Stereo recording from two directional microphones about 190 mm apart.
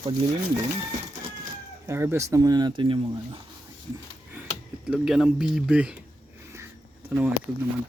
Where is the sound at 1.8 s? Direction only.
15° right (ahead or behind).